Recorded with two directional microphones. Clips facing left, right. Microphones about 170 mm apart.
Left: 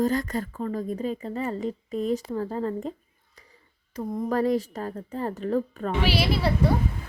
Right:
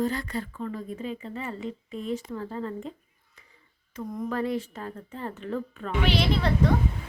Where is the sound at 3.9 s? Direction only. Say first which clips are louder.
Left 4 dB; 40° left (ahead or behind).